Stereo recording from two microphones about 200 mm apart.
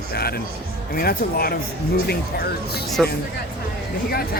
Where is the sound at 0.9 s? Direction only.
50° left (ahead or behind).